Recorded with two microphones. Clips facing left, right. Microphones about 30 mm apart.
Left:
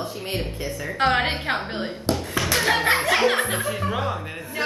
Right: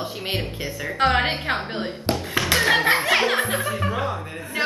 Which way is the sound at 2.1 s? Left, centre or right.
Right.